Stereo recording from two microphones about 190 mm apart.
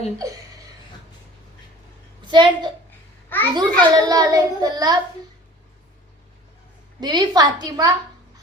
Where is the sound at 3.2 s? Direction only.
10° left (ahead or behind).